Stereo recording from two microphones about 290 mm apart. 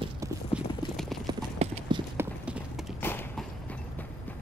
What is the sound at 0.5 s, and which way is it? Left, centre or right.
Clip-clop, centre.